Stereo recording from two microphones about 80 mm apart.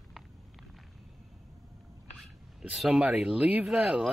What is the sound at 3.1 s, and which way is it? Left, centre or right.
Speech, centre.